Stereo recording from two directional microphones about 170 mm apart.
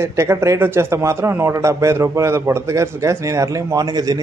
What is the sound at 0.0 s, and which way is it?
A man's voice, 15° right (ahead or behind).